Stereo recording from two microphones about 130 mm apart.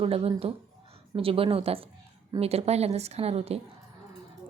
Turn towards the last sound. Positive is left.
turn(degrees=-50)  # may be behind; listen again after turning